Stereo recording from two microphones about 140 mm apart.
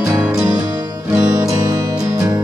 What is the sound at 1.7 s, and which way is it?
Music, 25° right (ahead or behind).